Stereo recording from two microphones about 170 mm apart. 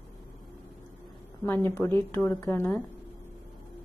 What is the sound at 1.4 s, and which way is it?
A woman's voice, 15° left (ahead or behind).